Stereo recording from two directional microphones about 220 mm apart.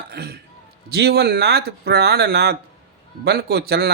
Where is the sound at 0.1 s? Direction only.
45° right (ahead or behind).